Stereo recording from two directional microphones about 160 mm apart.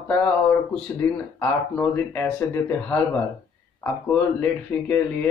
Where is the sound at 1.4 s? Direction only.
10° left (ahead or behind).